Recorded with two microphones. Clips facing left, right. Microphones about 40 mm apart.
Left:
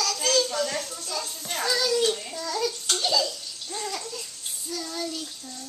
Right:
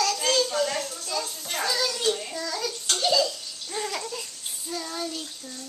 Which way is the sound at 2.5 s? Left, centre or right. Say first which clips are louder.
Left 4 dB; centre.